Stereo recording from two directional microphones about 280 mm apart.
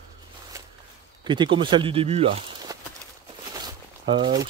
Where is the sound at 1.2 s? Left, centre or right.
Centre.